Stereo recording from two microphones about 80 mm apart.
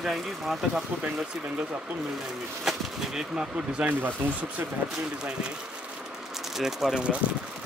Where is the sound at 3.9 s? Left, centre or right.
Right.